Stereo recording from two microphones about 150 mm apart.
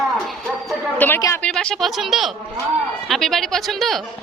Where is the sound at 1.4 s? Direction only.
5° left (ahead or behind).